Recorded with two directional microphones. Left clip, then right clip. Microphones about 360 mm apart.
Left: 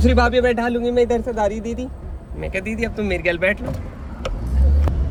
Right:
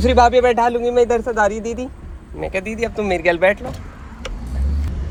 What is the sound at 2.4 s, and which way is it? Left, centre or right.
A man's voice, centre.